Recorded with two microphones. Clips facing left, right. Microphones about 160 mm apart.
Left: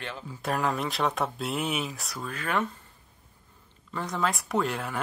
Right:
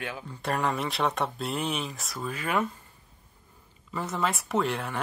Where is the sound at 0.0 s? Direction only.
10° right (ahead or behind).